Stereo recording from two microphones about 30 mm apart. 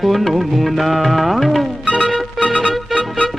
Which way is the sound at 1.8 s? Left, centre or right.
Left.